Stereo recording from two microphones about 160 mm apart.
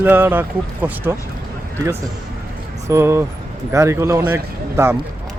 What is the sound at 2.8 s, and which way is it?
Speech, 15° right (ahead or behind).